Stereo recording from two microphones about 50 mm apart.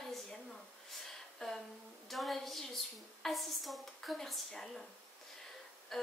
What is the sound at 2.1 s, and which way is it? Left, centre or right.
A woman's voice, centre.